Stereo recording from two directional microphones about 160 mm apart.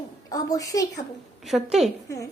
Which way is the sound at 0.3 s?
20° left (ahead or behind).